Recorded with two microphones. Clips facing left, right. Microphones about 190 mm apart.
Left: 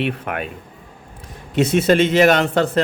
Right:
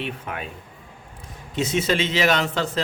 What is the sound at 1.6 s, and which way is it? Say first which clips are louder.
Speech: left 8 dB; 60° left (ahead or behind).